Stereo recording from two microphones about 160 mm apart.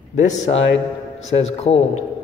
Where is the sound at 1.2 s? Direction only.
40° left (ahead or behind).